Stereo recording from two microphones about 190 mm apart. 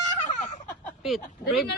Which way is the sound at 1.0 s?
Centre (ahead or behind).